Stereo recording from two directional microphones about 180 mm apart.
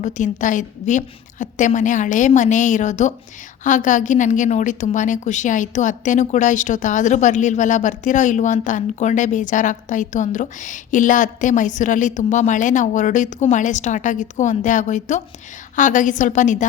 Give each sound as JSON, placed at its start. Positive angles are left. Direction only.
{"t": 0.0, "sound": "a woman's voice", "side_deg": 45}